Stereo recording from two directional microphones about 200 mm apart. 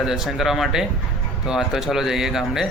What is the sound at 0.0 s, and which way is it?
Speech, centre (ahead or behind).